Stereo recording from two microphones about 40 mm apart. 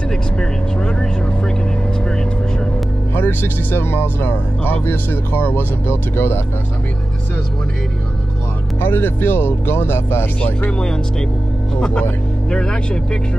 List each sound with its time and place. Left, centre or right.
0.1 s vehicle: centre
3.2 s speech: left
8.8 s speech: left
10.8 s speech: centre